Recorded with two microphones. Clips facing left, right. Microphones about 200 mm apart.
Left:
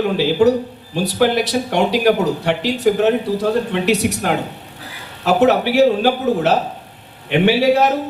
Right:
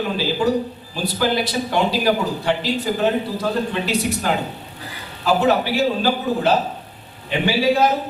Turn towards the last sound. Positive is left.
turn(degrees=70)  # may be behind; listen again after turning